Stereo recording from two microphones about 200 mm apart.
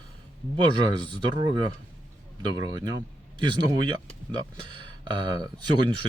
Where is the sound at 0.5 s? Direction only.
25° right (ahead or behind).